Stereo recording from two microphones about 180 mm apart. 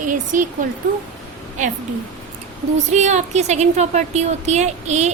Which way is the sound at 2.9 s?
40° right (ahead or behind).